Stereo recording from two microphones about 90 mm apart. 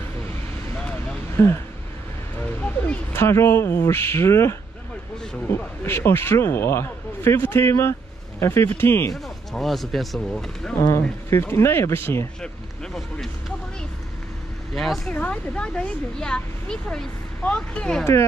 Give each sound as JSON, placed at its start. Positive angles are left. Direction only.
{"t": 1.3, "sound": "speech", "side_deg": 30}
{"t": 2.6, "sound": "a sound", "side_deg": 20}
{"t": 3.3, "sound": "a man's voice", "side_deg": 30}
{"t": 9.1, "sound": "speech", "side_deg": 0}
{"t": 10.9, "sound": "a man's voice", "side_deg": 30}
{"t": 14.7, "sound": "speech", "side_deg": 5}
{"t": 15.1, "sound": "speech", "side_deg": 15}